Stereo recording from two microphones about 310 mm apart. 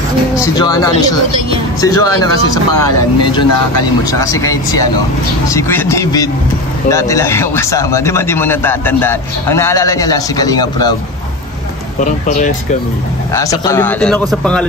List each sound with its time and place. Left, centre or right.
0.4 s speech: centre
12.0 s speech: left
13.3 s a man's voice: centre